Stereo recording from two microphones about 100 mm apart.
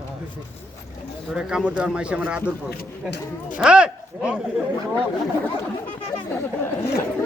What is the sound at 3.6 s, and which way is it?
Speech, 10° right (ahead or behind).